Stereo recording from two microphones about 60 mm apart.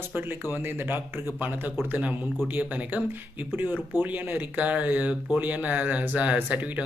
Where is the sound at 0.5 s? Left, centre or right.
Right.